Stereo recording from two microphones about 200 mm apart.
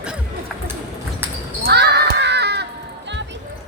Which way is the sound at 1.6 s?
55° right (ahead or behind).